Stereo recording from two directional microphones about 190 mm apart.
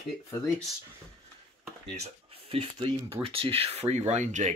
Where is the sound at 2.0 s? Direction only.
30° right (ahead or behind).